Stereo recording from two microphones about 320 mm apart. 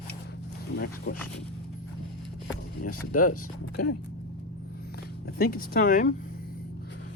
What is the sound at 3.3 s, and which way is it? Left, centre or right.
Speech, left.